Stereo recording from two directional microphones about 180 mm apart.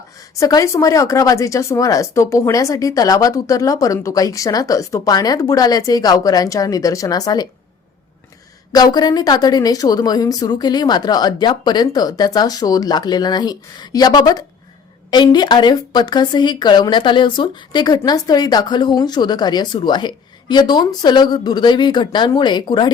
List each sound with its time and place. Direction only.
0.3 s speech: 20° left (ahead or behind)
8.7 s speech: 20° left (ahead or behind)